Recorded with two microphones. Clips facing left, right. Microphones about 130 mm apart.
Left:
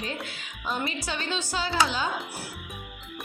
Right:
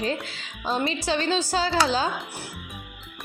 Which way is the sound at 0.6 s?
25° right (ahead or behind).